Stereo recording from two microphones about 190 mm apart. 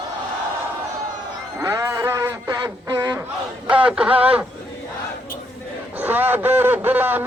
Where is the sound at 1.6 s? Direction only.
15° right (ahead or behind).